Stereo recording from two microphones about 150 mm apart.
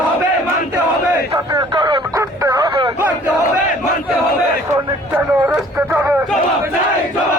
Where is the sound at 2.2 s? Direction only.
25° right (ahead or behind).